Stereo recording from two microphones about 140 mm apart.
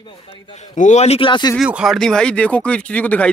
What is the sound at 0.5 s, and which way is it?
A man's voice, 60° left (ahead or behind).